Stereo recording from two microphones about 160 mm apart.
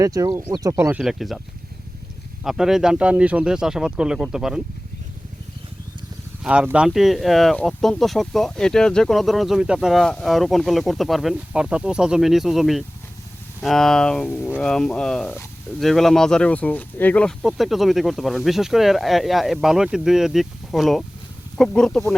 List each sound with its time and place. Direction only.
0.0 s speech: 20° right (ahead or behind)
1.0 s speech: centre (ahead or behind)
2.4 s speech: 5° right (ahead or behind)
6.4 s speech: 5° right (ahead or behind)